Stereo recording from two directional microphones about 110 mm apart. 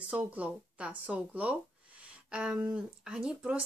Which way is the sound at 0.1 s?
15° right (ahead or behind).